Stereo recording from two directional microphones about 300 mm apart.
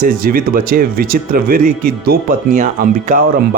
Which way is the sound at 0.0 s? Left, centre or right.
Right.